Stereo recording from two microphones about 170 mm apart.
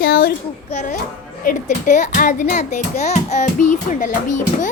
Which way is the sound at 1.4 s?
50° left (ahead or behind).